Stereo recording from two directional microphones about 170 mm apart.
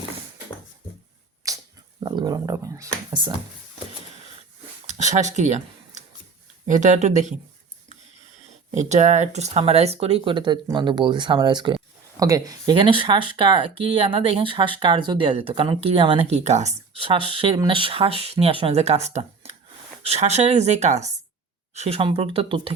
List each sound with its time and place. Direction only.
1.5 s a sound: 20° right (ahead or behind)
2.0 s speech: 25° right (ahead or behind)
4.9 s speech: 45° right (ahead or behind)
8.7 s speech: 45° right (ahead or behind)